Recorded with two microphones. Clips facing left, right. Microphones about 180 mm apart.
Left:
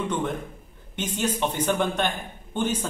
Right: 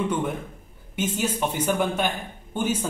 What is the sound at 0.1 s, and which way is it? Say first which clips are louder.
A man's voice: right 1 dB; 10° right (ahead or behind).